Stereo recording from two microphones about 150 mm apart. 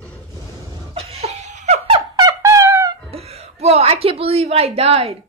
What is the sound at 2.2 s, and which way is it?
Brass instrument, 20° right (ahead or behind).